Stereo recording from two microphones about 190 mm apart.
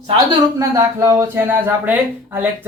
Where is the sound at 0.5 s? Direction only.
15° right (ahead or behind).